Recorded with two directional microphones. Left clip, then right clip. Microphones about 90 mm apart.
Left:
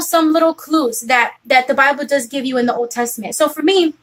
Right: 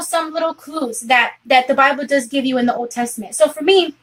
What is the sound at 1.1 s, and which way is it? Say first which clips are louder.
A woman's voice: even; 10° left (ahead or behind).